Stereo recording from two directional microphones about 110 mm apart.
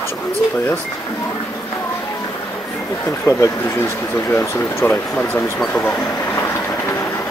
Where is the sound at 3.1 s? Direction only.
25° left (ahead or behind).